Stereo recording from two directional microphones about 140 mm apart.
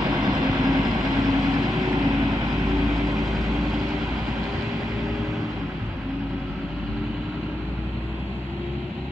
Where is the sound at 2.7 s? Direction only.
Centre (ahead or behind).